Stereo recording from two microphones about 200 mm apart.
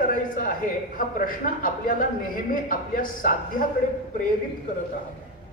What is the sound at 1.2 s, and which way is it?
A man's voice, 45° left (ahead or behind).